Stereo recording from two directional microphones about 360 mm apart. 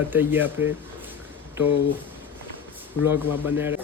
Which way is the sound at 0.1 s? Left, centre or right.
Centre.